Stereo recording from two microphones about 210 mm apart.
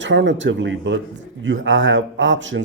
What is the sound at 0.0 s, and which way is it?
A man's voice, 60° right (ahead or behind).